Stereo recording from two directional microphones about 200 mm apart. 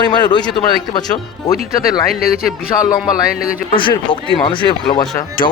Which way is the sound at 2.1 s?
Centre (ahead or behind).